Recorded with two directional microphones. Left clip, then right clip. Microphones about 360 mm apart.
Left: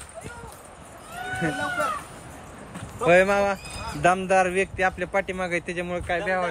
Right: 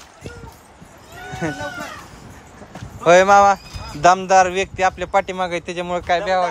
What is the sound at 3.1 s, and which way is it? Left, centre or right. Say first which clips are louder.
Speech: right 8 dB; centre.